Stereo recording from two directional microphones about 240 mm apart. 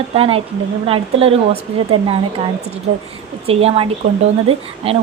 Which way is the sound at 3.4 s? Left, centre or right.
Right.